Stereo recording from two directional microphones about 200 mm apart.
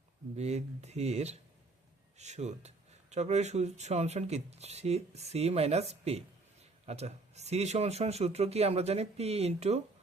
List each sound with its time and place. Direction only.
0.3 s speech: 35° right (ahead or behind)